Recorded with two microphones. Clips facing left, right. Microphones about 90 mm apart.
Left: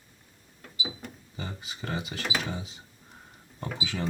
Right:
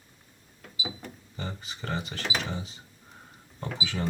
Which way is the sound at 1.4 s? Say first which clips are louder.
Right 1 dB; 10° left (ahead or behind).